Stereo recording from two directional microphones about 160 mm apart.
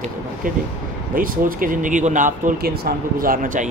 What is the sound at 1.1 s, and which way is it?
A man's voice, 60° right (ahead or behind).